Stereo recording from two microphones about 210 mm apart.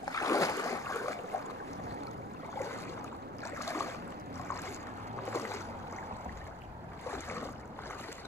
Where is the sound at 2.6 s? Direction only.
10° left (ahead or behind).